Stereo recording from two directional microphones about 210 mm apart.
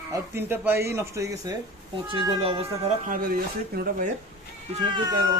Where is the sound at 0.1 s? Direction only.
10° right (ahead or behind).